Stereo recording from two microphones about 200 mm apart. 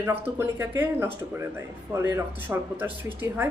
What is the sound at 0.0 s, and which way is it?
Speech, 10° right (ahead or behind).